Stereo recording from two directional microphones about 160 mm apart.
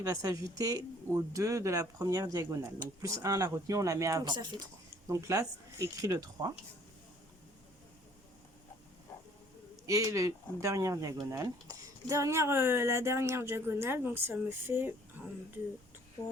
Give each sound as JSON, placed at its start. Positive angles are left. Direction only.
{"t": 0.0, "sound": "speech", "side_deg": -20}
{"t": 9.8, "sound": "speech", "side_deg": -20}